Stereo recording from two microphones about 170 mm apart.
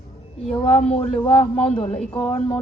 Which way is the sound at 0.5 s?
35° left (ahead or behind).